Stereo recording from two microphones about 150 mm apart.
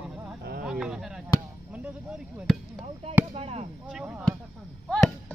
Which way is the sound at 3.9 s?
5° right (ahead or behind).